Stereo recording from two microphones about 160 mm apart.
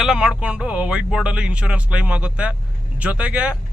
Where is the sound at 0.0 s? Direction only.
5° right (ahead or behind).